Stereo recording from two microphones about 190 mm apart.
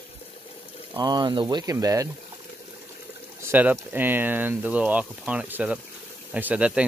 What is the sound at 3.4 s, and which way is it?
Speech, 10° right (ahead or behind).